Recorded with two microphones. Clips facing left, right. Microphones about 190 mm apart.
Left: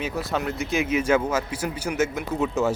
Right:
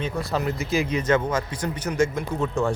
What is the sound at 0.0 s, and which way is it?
Speech, centre (ahead or behind).